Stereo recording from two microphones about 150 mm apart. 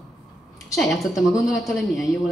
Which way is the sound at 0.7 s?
Centre (ahead or behind).